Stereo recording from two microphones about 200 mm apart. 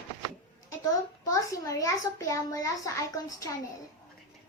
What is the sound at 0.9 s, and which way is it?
A child's voice, 15° left (ahead or behind).